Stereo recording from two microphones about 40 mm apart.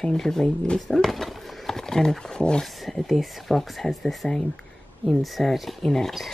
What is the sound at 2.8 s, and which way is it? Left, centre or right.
Speech, centre.